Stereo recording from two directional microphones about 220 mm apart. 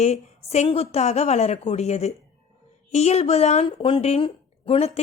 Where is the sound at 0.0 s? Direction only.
30° left (ahead or behind).